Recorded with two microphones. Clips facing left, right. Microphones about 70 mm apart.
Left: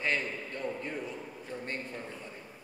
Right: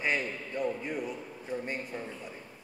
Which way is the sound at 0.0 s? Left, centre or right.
Centre.